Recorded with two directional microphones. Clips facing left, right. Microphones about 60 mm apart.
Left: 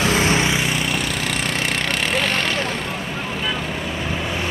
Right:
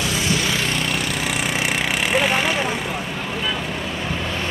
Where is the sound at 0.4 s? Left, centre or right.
Left.